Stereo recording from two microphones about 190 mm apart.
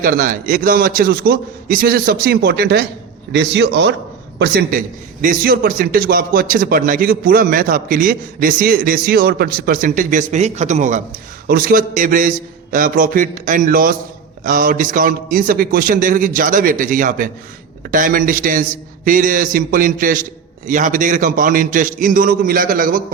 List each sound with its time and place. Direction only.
0.0 s a man's voice: 45° right (ahead or behind)
3.3 s a man's voice: 65° right (ahead or behind)
5.2 s a man's voice: 50° right (ahead or behind)